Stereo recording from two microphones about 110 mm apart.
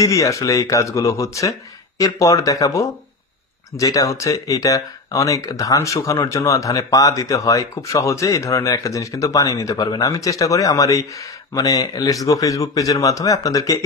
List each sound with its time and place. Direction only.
0.0 s speech: 30° left (ahead or behind)